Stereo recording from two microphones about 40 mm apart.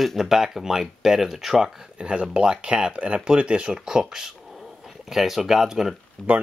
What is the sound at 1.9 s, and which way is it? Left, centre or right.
Speech, right.